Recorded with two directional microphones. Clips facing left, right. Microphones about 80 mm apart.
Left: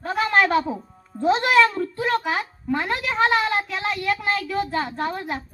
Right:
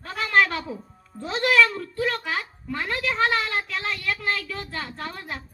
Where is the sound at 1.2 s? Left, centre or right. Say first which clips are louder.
Left 4 dB; left.